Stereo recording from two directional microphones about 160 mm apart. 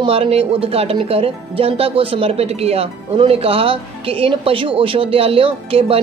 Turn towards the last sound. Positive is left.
turn(degrees=-35)  # may be behind; listen again after turning